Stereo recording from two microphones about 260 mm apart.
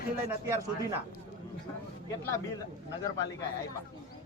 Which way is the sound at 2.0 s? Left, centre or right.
Centre.